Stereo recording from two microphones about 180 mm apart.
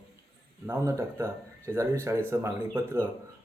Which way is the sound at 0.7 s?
15° right (ahead or behind).